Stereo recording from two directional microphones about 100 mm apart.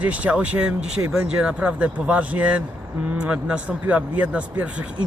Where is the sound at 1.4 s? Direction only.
10° right (ahead or behind).